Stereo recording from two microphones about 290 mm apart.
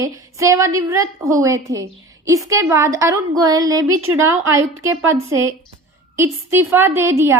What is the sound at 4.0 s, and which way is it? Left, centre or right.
Speech, right.